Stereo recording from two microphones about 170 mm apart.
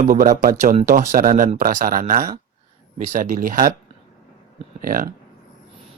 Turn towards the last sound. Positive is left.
turn(degrees=-55)  # may be behind; listen again after turning